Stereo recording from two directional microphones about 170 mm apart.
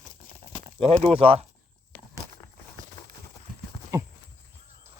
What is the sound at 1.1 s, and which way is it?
Speech, 35° right (ahead or behind).